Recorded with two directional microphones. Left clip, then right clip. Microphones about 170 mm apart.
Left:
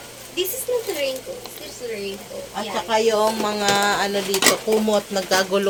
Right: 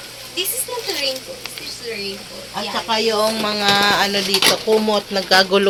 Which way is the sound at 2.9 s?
35° right (ahead or behind).